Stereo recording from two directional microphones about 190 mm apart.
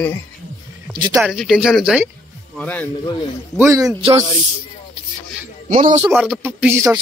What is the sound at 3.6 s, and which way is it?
Speech, 20° right (ahead or behind).